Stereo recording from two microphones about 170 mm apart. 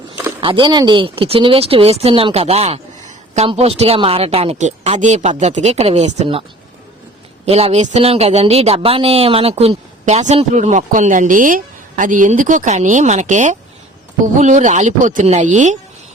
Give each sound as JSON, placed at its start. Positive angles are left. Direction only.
{"t": 0.4, "sound": "a man's voice", "side_deg": -30}
{"t": 7.4, "sound": "a man's voice", "side_deg": -40}